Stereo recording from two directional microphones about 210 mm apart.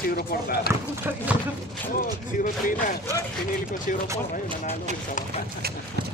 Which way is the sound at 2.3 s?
40° left (ahead or behind).